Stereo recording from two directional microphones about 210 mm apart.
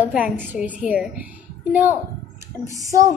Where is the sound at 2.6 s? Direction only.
15° right (ahead or behind).